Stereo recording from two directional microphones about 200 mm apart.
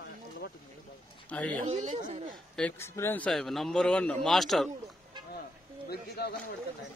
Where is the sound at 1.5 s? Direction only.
35° right (ahead or behind).